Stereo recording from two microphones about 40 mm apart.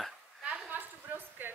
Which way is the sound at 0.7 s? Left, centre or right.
Right.